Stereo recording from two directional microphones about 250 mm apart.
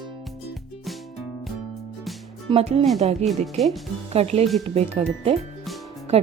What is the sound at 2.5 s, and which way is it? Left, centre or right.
Speech, right.